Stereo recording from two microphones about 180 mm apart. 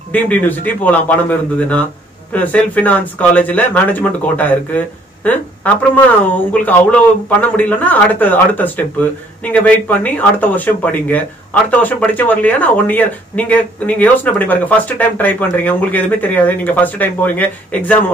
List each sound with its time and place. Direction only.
0.1 s speech: 10° left (ahead or behind)